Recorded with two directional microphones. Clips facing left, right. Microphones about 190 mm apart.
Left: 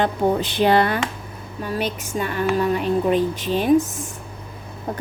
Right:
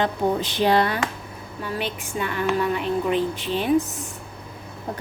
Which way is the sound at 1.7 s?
40° left (ahead or behind).